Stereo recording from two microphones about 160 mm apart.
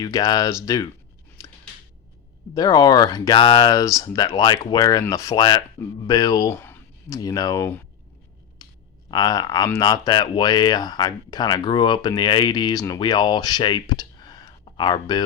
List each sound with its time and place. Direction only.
0.0 s speech: 20° left (ahead or behind)
2.6 s speech: 25° left (ahead or behind)
9.0 s speech: 25° left (ahead or behind)